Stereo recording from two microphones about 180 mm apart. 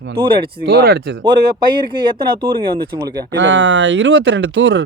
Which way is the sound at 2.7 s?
55° right (ahead or behind).